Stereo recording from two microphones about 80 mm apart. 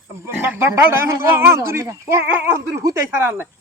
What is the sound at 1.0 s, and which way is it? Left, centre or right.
Speech, right.